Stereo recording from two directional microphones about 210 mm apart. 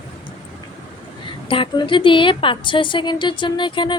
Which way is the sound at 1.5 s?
25° left (ahead or behind).